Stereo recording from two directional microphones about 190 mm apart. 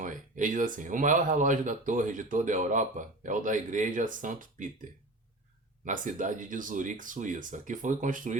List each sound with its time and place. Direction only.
0.0 s speech: 45° right (ahead or behind)
5.8 s speech: 40° right (ahead or behind)